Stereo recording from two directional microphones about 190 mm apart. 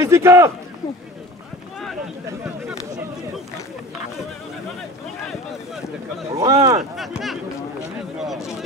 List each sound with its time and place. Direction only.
0.0 s speech: 15° right (ahead or behind)
6.3 s speech: 15° right (ahead or behind)
7.0 s speech: centre (ahead or behind)
8.2 s a sound: centre (ahead or behind)